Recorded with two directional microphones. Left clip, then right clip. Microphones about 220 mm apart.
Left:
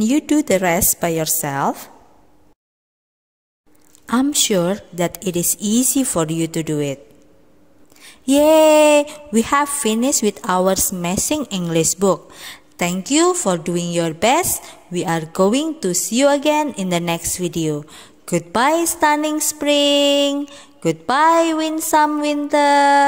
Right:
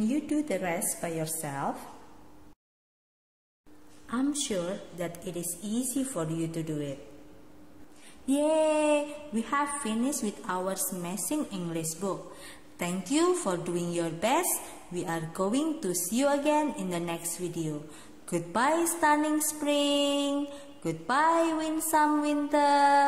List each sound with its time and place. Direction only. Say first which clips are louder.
0.1 s a woman's voice: left 17 dB; 45° left (ahead or behind)
4.0 s a woman's voice: left 13 dB; 45° left (ahead or behind)
8.3 s a woman's voice: left 14 dB; 45° left (ahead or behind)